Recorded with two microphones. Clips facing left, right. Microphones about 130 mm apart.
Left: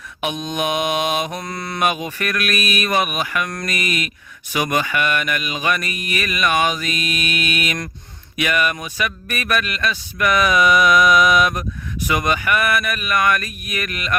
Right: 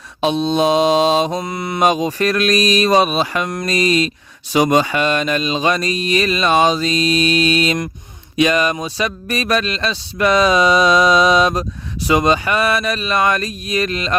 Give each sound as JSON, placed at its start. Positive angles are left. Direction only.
{"t": 0.4, "sound": "speech", "side_deg": -30}
{"t": 1.3, "sound": "speech", "side_deg": -20}
{"t": 1.9, "sound": "speech", "side_deg": -35}